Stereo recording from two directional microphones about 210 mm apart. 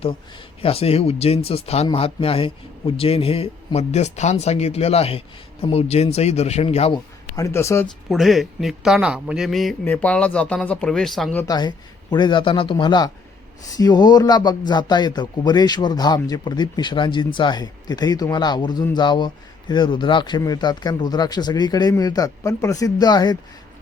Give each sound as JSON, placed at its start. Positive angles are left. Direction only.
{"t": 0.6, "sound": "a man's voice", "side_deg": 30}
{"t": 7.3, "sound": "speech", "side_deg": 15}
{"t": 8.1, "sound": "a man's voice", "side_deg": 0}
{"t": 11.4, "sound": "a man's voice", "side_deg": 20}